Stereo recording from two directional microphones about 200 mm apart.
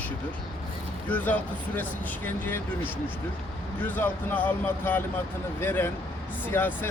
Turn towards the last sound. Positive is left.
turn(degrees=10)  # may be behind; listen again after turning